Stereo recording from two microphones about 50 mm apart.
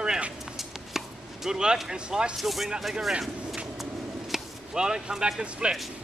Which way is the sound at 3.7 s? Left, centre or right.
Centre.